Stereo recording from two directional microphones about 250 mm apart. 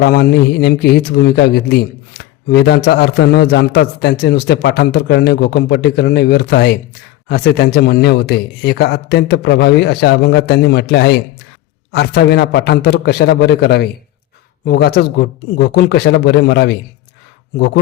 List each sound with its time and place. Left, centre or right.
0.0 s speech: left